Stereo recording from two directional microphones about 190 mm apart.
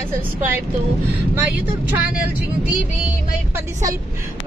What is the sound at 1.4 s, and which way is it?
A woman's voice, 10° right (ahead or behind).